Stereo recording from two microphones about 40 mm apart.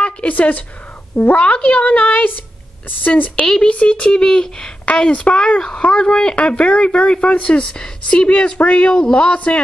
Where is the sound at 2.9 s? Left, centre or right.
Left.